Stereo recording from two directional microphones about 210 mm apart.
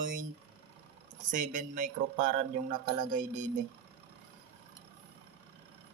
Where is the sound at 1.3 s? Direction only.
40° right (ahead or behind).